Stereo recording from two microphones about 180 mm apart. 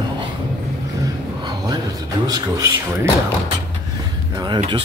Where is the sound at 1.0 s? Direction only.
20° right (ahead or behind).